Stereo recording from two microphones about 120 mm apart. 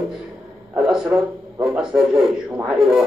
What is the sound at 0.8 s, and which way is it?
A man's voice, 5° right (ahead or behind).